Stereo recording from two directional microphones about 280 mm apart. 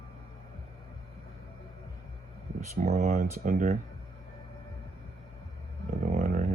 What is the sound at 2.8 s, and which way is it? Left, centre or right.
Speech, right.